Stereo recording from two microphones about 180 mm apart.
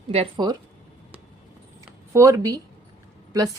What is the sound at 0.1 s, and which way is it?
Speech, 30° right (ahead or behind).